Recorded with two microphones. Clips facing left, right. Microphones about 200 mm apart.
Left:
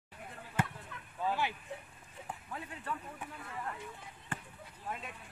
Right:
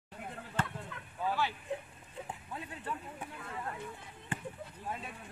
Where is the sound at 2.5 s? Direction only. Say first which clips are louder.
Even; 20° right (ahead or behind).